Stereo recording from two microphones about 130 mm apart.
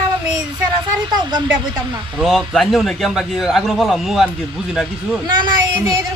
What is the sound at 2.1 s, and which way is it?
A man's voice, centre (ahead or behind).